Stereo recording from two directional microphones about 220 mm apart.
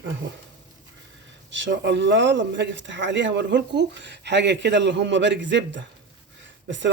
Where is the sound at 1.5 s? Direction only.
55° right (ahead or behind).